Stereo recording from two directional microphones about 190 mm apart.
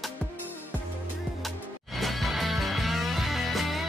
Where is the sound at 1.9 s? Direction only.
Centre (ahead or behind).